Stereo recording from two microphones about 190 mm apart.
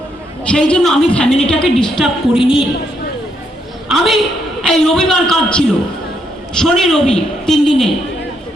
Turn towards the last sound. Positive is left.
turn(degrees=0)  # may be behind; listen again after turning